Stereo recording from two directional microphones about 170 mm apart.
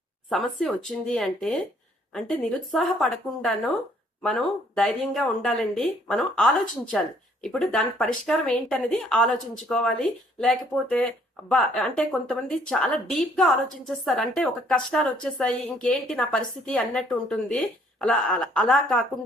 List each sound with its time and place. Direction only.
0.3 s speech: centre (ahead or behind)